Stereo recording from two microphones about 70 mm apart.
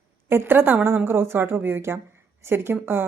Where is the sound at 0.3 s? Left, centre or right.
Right.